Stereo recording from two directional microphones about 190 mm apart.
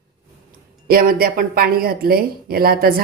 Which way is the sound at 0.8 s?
50° right (ahead or behind).